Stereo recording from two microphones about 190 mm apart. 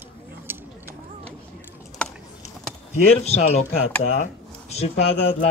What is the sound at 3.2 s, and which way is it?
Speech, 35° left (ahead or behind).